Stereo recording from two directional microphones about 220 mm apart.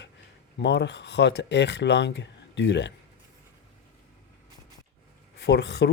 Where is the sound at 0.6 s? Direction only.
50° left (ahead or behind).